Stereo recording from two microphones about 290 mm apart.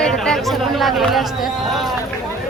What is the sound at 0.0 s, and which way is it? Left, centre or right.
Chatter, centre.